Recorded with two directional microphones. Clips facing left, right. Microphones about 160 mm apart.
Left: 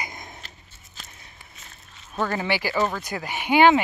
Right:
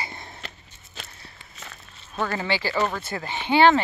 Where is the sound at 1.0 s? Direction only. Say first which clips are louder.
Right 5 dB; 70° right (ahead or behind).